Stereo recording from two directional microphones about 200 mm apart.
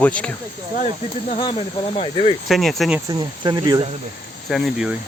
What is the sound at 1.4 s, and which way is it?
Speech, 25° left (ahead or behind).